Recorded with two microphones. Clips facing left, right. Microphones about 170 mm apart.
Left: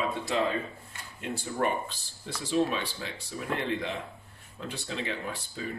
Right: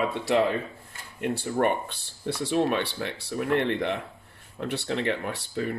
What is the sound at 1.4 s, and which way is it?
Speech, 65° right (ahead or behind).